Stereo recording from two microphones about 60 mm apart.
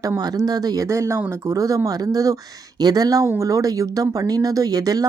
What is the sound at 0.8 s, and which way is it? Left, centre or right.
Speech, right.